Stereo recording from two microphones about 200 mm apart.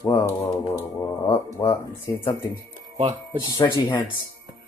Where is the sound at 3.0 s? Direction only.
25° right (ahead or behind).